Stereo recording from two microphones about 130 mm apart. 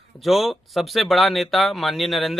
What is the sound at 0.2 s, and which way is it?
Speech, centre (ahead or behind).